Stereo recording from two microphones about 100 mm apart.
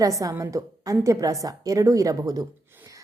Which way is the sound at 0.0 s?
35° right (ahead or behind).